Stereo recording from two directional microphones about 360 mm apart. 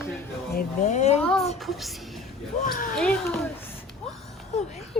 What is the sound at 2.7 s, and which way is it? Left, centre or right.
Speech, left.